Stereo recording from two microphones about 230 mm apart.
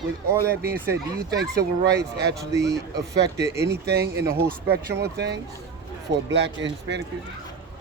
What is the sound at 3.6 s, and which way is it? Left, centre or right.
Speech, right.